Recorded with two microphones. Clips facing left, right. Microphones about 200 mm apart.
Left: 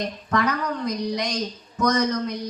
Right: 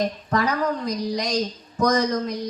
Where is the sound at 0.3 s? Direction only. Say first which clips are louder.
Left 1 dB; 35° right (ahead or behind).